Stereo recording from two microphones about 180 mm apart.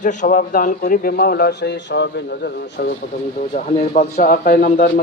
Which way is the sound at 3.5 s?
40° left (ahead or behind).